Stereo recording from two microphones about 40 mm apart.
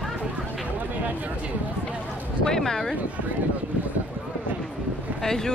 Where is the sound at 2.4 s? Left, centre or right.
Centre.